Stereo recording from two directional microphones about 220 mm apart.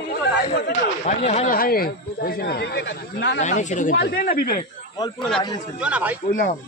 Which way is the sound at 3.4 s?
35° left (ahead or behind).